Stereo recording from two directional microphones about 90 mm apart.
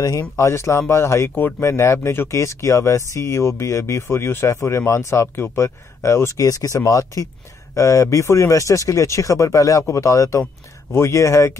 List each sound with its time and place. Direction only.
0.0 s speech: 40° left (ahead or behind)
0.5 s speech: 30° left (ahead or behind)